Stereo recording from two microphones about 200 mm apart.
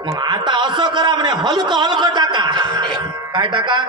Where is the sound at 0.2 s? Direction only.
20° right (ahead or behind).